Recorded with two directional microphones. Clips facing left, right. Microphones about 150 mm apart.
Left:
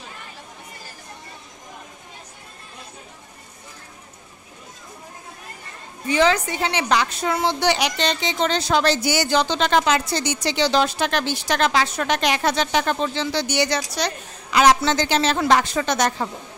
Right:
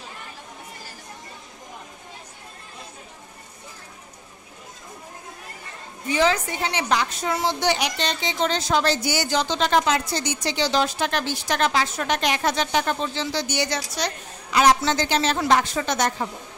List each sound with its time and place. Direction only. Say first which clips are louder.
6.0 s a woman's voice: left 3 dB; 75° left (ahead or behind)
7.3 s a woman's voice: left 2 dB; 70° left (ahead or behind)